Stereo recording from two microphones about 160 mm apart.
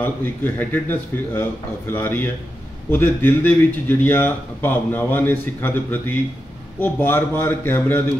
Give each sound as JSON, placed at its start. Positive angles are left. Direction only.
{"t": 0.0, "sound": "speech", "side_deg": 10}